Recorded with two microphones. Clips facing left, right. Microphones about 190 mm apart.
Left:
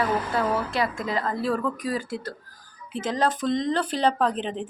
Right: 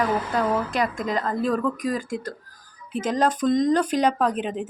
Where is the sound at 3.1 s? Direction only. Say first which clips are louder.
Right 2 dB; 20° right (ahead or behind).